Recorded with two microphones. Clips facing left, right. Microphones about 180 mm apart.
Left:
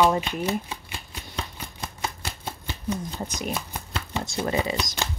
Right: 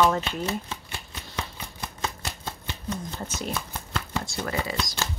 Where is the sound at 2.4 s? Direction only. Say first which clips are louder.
Left 4 dB; 15° left (ahead or behind).